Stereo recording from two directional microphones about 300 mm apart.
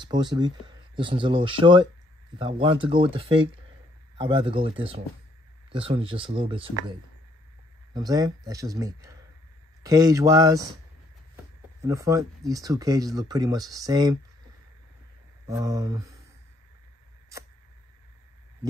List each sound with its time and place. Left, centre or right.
0.0 s speech: centre
7.9 s speech: centre
11.8 s speech: centre
15.4 s speech: centre